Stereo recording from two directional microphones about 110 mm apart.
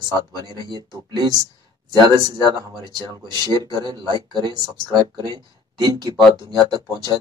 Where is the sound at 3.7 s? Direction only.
40° right (ahead or behind).